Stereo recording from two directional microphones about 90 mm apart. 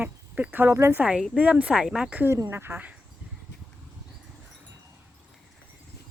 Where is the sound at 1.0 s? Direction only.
15° right (ahead or behind).